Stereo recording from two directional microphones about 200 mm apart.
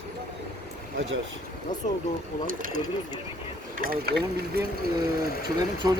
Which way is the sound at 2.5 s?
45° right (ahead or behind).